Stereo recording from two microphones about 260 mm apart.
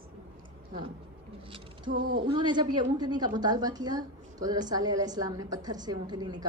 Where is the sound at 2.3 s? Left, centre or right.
Centre.